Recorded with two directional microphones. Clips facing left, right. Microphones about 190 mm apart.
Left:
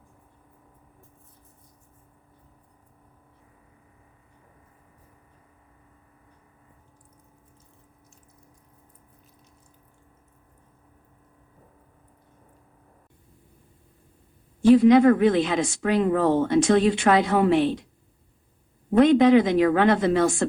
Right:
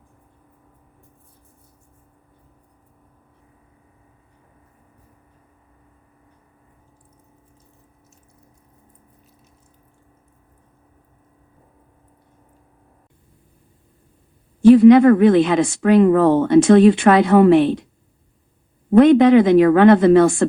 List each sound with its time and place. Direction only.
14.6 s speech: 60° right (ahead or behind)
18.9 s speech: 60° right (ahead or behind)